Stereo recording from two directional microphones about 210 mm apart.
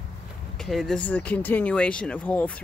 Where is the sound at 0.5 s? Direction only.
Centre (ahead or behind).